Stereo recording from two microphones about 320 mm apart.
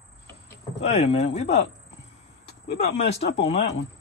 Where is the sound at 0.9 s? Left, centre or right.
Centre.